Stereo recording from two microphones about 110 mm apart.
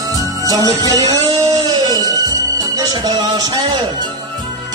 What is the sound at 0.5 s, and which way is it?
Music, 30° right (ahead or behind).